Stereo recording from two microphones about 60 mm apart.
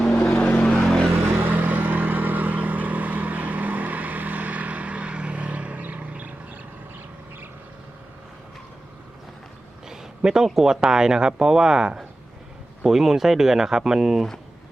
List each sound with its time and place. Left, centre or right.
0.3 s vehicle: left
0.7 s vehicle: centre
1.1 s vehicle: right
9.8 s a sound: centre
10.8 s speech: centre